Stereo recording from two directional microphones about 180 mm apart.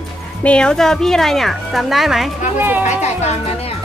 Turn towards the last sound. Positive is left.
turn(degrees=35)  # may be behind; listen again after turning